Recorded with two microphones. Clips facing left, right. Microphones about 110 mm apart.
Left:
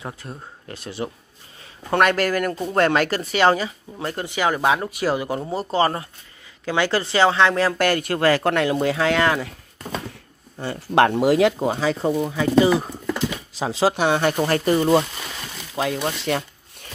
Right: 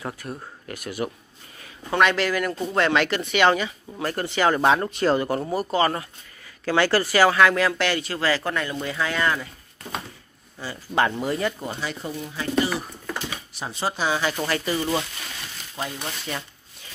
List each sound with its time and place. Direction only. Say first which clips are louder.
0.0 s speech: right 1 dB; 20° left (ahead or behind)
1.9 s speech: left 2 dB; 50° left (ahead or behind)
4.0 s speech: right 1 dB; 15° left (ahead or behind)
5.5 s speech: left 3 dB; 30° left (ahead or behind)
6.6 s speech: right 1 dB; 15° left (ahead or behind); by 9.6 s 80° left
10.6 s speech: left 6 dB; 60° left (ahead or behind); by 12.1 s 90° left
13.6 s speech: left 8 dB; 90° left; by 14.3 s 60° left (ahead or behind)
14.3 s speech: left 5 dB; 35° left (ahead or behind)
14.6 s speech: left 8 dB; 55° left (ahead or behind)
15.7 s speech: left 8 dB; 75° left (ahead or behind)